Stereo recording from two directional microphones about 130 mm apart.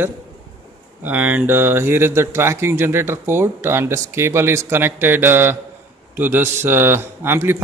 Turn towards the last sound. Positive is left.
turn(degrees=-15)  # may be behind; listen again after turning